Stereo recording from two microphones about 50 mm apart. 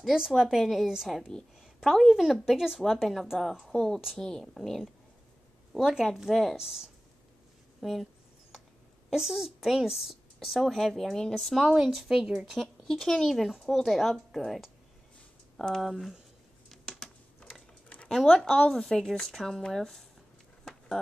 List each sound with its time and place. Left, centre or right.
0.4 s a woman's voice: centre
1.6 s a sound: centre
2.1 s a woman's voice: centre
7.8 s a sound: centre
9.1 s a woman's voice: centre
17.0 s typing: centre
17.4 s mechanisms: left
18.0 s a woman's voice: centre